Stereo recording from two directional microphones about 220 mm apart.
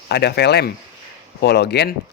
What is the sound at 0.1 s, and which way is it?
Speech, 50° left (ahead or behind).